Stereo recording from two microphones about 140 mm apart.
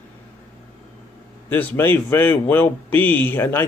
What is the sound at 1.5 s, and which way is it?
A man's voice, 10° left (ahead or behind).